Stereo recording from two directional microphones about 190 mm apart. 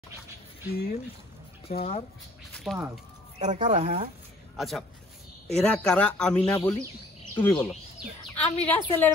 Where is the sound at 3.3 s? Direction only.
35° right (ahead or behind).